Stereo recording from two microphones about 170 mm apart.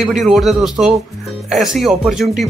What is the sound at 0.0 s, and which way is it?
Speech, centre (ahead or behind).